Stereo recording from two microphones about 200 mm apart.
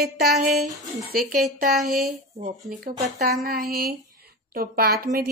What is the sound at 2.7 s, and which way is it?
A woman's voice, 50° right (ahead or behind).